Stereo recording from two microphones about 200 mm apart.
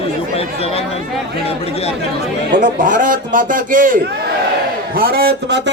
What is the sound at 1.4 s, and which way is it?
Speech, 30° left (ahead or behind).